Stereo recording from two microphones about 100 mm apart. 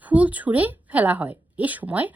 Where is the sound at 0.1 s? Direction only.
15° right (ahead or behind).